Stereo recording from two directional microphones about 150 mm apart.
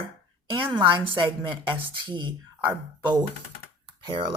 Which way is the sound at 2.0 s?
30° right (ahead or behind).